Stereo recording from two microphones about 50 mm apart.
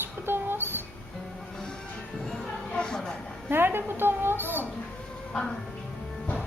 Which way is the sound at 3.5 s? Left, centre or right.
Right.